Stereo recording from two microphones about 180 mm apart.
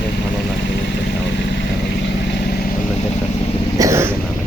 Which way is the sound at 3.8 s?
15° right (ahead or behind).